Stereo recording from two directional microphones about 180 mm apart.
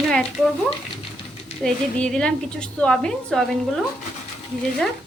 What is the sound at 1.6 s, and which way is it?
A woman's voice, 5° left (ahead or behind).